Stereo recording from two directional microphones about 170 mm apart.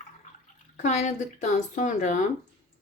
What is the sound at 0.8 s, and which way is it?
Speech, 45° left (ahead or behind).